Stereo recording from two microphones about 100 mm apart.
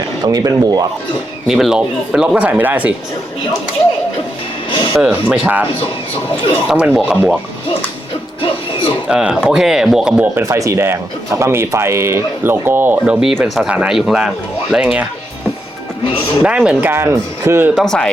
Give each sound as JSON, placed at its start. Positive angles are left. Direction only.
{"t": 0.3, "sound": "speech", "side_deg": -35}
{"t": 1.5, "sound": "speech", "side_deg": -5}
{"t": 4.7, "sound": "speech", "side_deg": 55}
{"t": 4.9, "sound": "speech", "side_deg": -10}
{"t": 6.7, "sound": "speech", "side_deg": -5}
{"t": 8.4, "sound": "music", "side_deg": 60}
{"t": 9.0, "sound": "speech", "side_deg": -10}
{"t": 10.3, "sound": "speech", "side_deg": -30}
{"t": 16.0, "sound": "speech", "side_deg": 60}
{"t": 16.4, "sound": "speech", "side_deg": -10}
{"t": 16.9, "sound": "speech", "side_deg": -25}
{"t": 17.7, "sound": "speech", "side_deg": 5}